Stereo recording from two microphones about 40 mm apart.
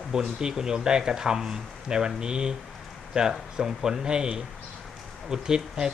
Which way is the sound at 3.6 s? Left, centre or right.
Centre.